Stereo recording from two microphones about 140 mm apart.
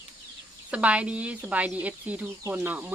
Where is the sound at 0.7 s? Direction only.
10° right (ahead or behind).